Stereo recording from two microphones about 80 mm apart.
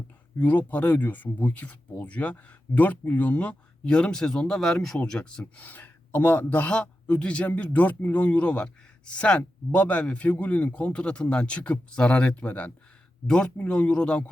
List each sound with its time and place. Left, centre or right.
0.3 s speech: left; by 4.9 s centre
5.5 s speech: centre